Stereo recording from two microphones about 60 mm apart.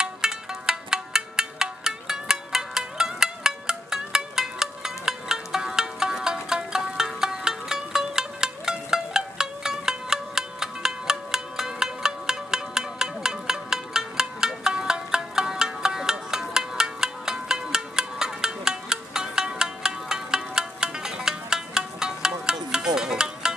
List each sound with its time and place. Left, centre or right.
0.0 s music: centre